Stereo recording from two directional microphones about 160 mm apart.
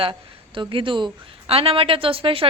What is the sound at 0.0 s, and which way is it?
A woman's voice, 30° right (ahead or behind).